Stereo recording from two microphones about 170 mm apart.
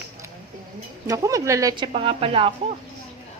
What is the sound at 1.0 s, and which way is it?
A woman's voice, 20° right (ahead or behind).